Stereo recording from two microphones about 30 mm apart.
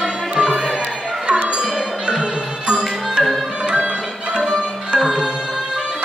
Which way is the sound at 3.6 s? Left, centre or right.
Right.